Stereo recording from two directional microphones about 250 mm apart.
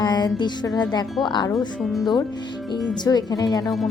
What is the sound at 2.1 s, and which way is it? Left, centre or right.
Speech, centre.